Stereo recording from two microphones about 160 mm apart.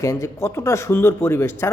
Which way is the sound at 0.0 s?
20° left (ahead or behind).